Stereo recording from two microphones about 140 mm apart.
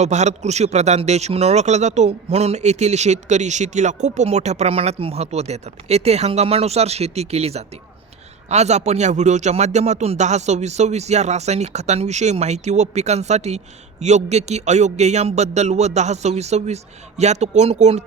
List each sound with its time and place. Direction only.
0.0 s a man's voice: 55° right (ahead or behind)